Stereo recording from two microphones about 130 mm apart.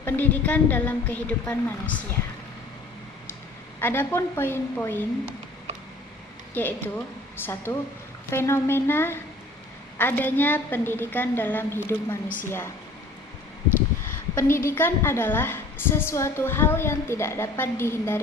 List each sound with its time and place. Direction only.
0.0 s a woman's voice: 15° left (ahead or behind)
3.8 s a woman's voice: 15° left (ahead or behind)
6.5 s a woman's voice: 15° left (ahead or behind)
14.3 s a woman's voice: 20° left (ahead or behind)